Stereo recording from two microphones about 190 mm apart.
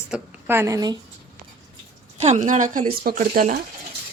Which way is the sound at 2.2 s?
35° right (ahead or behind).